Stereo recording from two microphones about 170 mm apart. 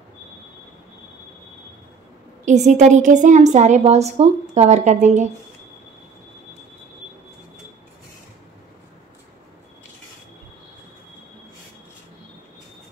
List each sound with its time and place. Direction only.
2.4 s a woman's voice: 45° right (ahead or behind)